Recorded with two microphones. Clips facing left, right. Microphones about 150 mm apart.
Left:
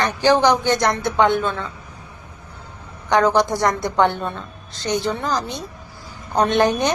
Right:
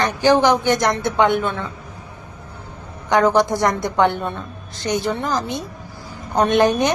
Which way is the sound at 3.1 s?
20° right (ahead or behind).